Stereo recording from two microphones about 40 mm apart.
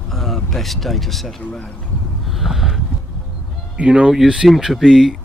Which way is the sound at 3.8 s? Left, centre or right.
Right.